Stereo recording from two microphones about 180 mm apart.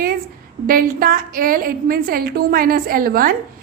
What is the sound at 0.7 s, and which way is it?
A woman's voice, 50° right (ahead or behind).